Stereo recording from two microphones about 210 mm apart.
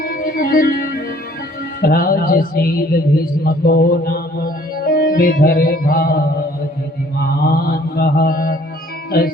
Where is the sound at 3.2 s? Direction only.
45° left (ahead or behind).